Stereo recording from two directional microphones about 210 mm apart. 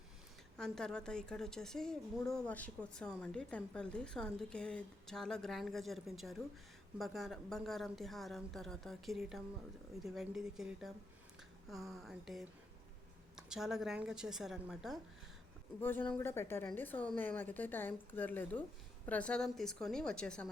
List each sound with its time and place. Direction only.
0.5 s a woman's voice: 5° left (ahead or behind)
15.8 s a woman's voice: 10° left (ahead or behind)